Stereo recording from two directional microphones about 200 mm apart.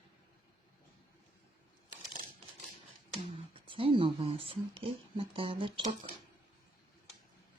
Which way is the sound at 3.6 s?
25° right (ahead or behind).